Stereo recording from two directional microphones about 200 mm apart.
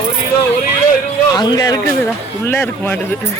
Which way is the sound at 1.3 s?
20° left (ahead or behind).